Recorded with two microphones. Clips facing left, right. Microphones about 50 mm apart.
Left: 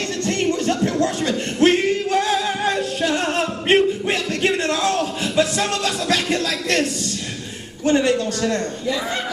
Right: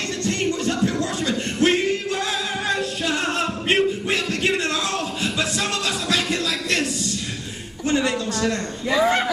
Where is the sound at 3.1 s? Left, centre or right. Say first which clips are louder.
Left 1 dB; left.